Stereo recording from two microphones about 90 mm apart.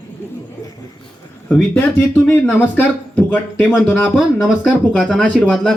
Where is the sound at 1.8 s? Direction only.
20° left (ahead or behind).